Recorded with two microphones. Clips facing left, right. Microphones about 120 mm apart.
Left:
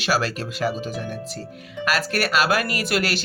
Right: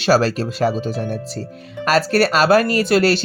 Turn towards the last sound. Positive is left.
turn(degrees=-30)  # may be behind; listen again after turning